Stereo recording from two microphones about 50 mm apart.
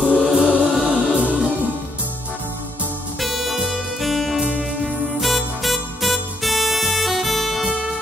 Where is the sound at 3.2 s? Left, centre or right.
Centre.